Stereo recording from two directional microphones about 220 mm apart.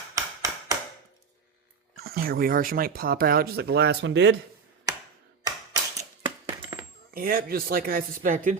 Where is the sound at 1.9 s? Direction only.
45° right (ahead or behind).